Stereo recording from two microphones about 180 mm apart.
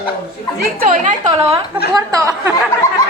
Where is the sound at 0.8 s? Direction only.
45° right (ahead or behind).